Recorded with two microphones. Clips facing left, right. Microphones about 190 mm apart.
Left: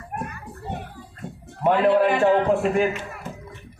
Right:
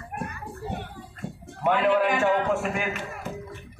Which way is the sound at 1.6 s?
35° left (ahead or behind).